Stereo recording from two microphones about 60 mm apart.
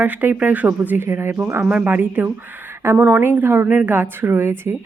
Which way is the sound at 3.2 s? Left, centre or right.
Right.